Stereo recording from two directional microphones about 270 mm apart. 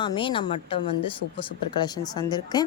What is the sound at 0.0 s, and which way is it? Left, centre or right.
Speech, centre.